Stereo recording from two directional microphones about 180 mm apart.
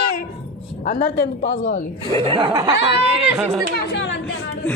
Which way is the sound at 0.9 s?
45° left (ahead or behind).